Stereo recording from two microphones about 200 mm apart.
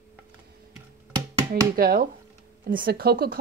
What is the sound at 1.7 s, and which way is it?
Speech, 45° right (ahead or behind).